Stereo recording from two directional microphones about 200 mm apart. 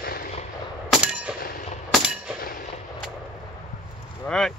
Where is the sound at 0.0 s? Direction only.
50° left (ahead or behind).